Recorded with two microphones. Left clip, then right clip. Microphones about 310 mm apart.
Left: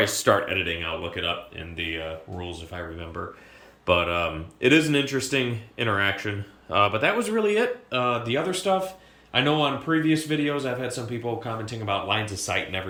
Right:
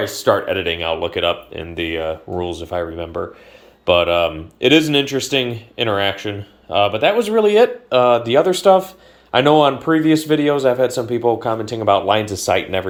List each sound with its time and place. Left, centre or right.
0.0 s speech: centre